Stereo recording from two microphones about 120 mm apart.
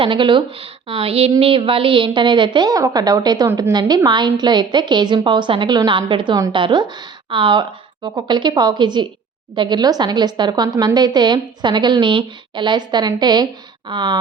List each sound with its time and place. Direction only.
0.0 s a woman's voice: 45° right (ahead or behind)